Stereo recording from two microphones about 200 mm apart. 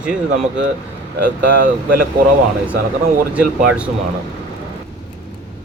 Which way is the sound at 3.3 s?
5° right (ahead or behind).